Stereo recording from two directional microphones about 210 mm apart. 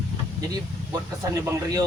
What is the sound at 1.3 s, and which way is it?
Speech, 15° right (ahead or behind).